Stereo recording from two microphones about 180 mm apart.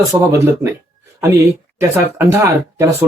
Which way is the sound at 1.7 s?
15° right (ahead or behind).